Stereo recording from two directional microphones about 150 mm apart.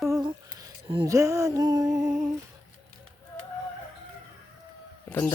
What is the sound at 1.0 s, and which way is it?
Music, 20° right (ahead or behind).